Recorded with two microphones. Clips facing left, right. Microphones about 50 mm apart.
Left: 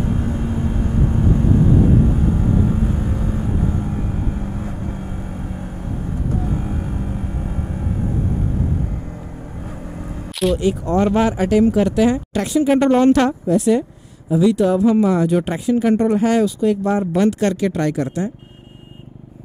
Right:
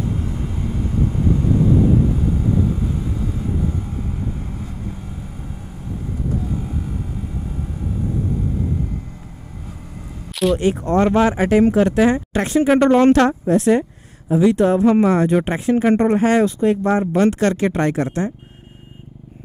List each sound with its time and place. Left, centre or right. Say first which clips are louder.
0.0 s vehicle: left 3 dB; left
6.4 s music: left 2 dB; left
10.6 s speech: right 1 dB; right
15.3 s speech: right 1 dB; right